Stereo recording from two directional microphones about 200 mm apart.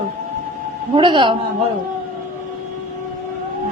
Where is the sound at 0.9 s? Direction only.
25° right (ahead or behind).